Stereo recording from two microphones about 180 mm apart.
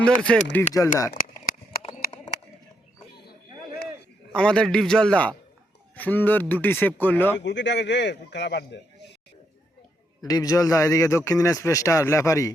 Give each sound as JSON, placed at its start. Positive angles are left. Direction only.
{"t": 0.0, "sound": "a man's voice", "side_deg": 5}
{"t": 0.7, "sound": "a man's voice", "side_deg": 20}
{"t": 1.1, "sound": "a sound", "side_deg": 50}
{"t": 4.3, "sound": "a man's voice", "side_deg": 5}
{"t": 7.3, "sound": "speech", "side_deg": 75}
{"t": 10.2, "sound": "a man's voice", "side_deg": 20}